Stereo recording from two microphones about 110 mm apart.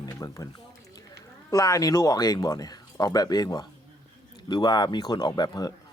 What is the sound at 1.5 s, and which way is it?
Speech, 30° left (ahead or behind).